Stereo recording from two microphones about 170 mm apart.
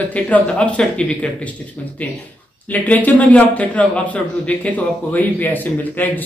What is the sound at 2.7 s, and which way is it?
A man's voice, 10° left (ahead or behind).